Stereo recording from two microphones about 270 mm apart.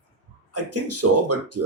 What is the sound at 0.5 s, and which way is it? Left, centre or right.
Speech, right.